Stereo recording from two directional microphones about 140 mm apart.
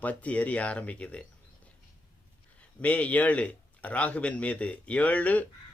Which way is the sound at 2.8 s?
10° left (ahead or behind).